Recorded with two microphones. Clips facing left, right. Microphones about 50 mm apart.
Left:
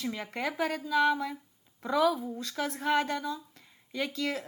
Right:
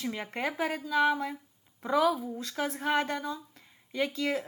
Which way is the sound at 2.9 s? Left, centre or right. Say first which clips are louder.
Left 2 dB; right.